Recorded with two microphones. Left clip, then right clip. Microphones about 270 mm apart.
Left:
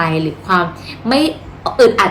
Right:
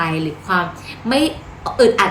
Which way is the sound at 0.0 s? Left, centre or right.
Centre.